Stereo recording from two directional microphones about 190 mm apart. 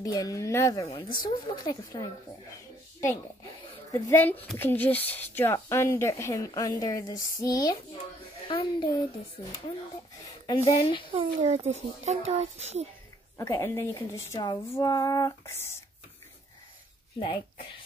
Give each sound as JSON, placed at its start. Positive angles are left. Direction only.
{"t": 0.0, "sound": "speech", "side_deg": 20}
{"t": 0.8, "sound": "speech", "side_deg": 25}
{"t": 3.9, "sound": "speech", "side_deg": 10}
{"t": 10.4, "sound": "a woman's voice", "side_deg": 25}
{"t": 11.1, "sound": "a child's voice", "side_deg": -30}
{"t": 13.4, "sound": "speech", "side_deg": 15}